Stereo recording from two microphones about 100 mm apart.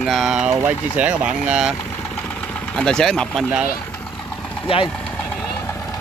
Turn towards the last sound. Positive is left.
turn(degrees=70)  # may be behind; listen again after turning